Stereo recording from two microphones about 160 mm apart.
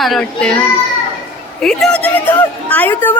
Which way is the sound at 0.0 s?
Centre (ahead or behind).